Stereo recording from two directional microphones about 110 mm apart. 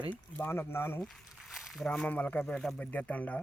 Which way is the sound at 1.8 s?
10° left (ahead or behind).